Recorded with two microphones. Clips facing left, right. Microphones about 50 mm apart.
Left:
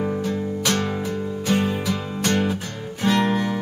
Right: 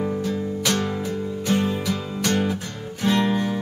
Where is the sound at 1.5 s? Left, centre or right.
Left.